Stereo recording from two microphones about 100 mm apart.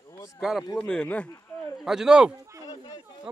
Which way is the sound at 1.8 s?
5° right (ahead or behind).